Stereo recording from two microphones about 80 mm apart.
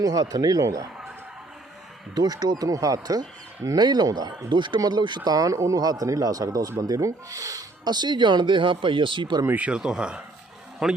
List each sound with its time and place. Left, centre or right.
0.0 s speech: right
2.1 s speech: right
9.5 s a man's voice: centre